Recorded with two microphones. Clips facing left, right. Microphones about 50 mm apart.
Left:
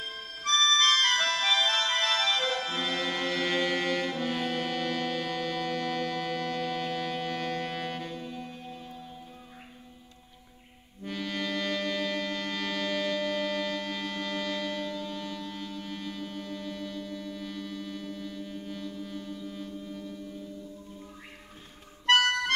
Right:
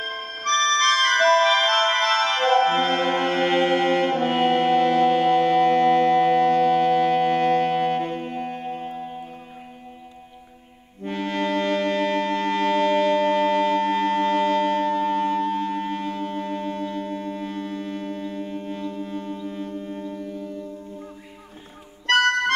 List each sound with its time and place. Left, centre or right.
0.0 s music: right
11.1 s music: right
22.0 s music: right